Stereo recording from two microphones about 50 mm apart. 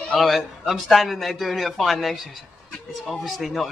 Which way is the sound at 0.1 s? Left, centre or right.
Centre.